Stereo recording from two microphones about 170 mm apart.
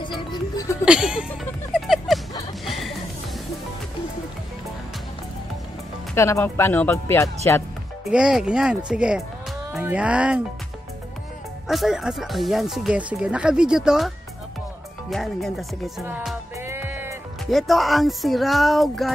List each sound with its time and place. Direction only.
0.2 s music: 25° left (ahead or behind)
0.8 s music: 5° right (ahead or behind)
6.1 s speech: 15° left (ahead or behind)
8.1 s speech: 5° right (ahead or behind)
11.6 s speech: centre (ahead or behind)
16.0 s music: 10° right (ahead or behind)
17.5 s speech: centre (ahead or behind)